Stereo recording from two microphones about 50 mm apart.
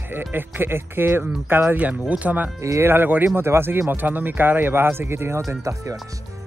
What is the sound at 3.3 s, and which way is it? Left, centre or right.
Speech, right.